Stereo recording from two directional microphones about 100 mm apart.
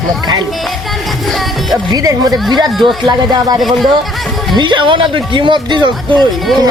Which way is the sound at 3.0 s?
45° right (ahead or behind).